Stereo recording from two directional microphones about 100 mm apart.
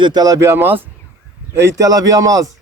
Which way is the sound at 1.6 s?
30° right (ahead or behind).